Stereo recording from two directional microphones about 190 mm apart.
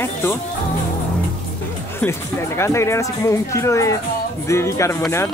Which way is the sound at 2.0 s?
15° left (ahead or behind).